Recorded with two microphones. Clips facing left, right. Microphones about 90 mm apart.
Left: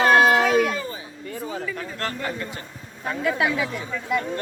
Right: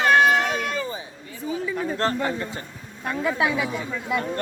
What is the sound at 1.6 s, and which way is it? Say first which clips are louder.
Speech: right 4 dB; 15° right (ahead or behind).